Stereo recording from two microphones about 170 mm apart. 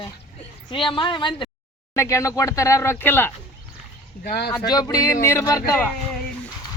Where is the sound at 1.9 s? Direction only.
20° left (ahead or behind).